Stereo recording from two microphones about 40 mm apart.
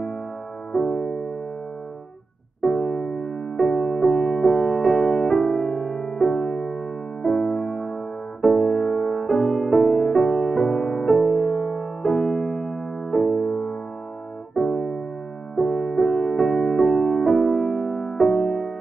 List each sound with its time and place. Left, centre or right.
0.7 s music: centre
2.6 s music: centre